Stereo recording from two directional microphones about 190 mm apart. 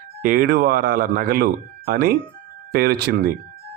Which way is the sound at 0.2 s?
50° right (ahead or behind).